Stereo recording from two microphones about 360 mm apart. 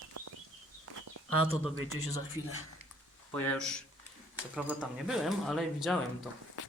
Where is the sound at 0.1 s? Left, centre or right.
Right.